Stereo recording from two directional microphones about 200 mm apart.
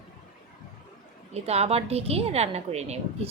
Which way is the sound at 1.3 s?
30° right (ahead or behind).